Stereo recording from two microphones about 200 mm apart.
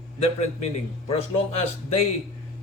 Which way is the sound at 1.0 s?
30° left (ahead or behind).